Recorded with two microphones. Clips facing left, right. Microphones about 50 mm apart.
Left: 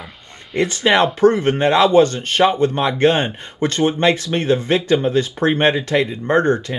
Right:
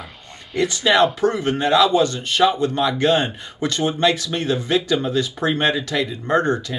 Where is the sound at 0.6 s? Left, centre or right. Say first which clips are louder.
Left 1 dB; left.